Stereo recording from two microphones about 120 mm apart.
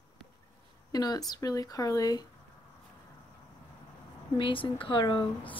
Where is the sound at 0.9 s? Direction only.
35° left (ahead or behind).